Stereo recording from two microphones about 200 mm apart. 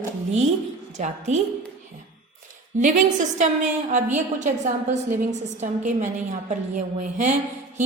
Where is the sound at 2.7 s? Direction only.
40° right (ahead or behind).